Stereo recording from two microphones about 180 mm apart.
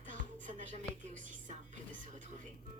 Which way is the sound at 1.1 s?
45° right (ahead or behind).